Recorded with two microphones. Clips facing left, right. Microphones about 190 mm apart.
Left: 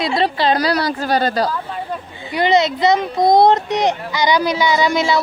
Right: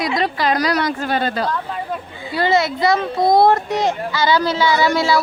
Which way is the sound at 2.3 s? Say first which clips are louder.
Left 2 dB; 20° left (ahead or behind).